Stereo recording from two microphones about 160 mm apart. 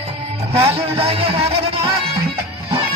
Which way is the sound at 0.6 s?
40° right (ahead or behind).